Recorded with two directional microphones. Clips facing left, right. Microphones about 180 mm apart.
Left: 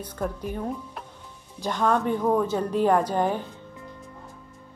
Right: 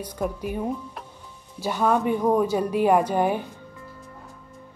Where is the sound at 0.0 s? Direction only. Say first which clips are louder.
Right 2 dB; 10° right (ahead or behind).